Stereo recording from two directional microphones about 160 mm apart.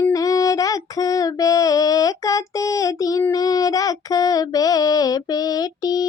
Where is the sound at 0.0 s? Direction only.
20° left (ahead or behind).